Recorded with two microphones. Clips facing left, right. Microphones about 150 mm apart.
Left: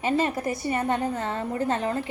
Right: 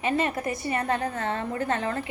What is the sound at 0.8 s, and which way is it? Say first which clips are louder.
A woman's voice: left 1 dB; 25° left (ahead or behind).